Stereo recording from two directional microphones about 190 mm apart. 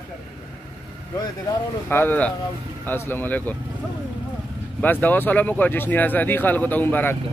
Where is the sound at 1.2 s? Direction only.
15° left (ahead or behind).